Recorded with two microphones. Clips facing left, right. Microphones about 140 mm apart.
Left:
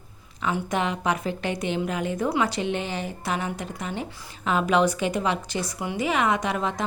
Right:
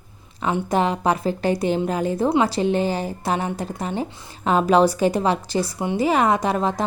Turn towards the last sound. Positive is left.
turn(degrees=-35)  # may be behind; listen again after turning